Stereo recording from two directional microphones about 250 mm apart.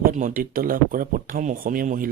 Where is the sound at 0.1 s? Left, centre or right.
Right.